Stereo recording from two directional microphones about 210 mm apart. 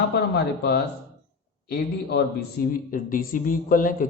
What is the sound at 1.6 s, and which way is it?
A man's voice, 50° left (ahead or behind).